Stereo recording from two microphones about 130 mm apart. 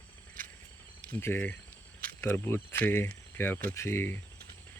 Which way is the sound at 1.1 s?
15° left (ahead or behind).